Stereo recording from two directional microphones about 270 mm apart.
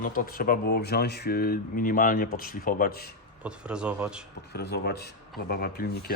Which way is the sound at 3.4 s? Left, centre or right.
Centre.